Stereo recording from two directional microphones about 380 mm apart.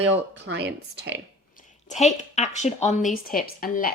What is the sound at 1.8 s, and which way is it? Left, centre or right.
A woman's voice, centre.